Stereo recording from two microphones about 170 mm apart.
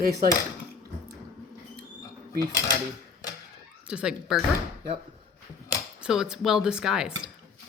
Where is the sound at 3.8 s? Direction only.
5° right (ahead or behind).